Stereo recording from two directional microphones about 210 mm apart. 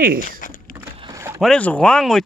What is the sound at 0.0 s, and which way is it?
Speech, 45° right (ahead or behind).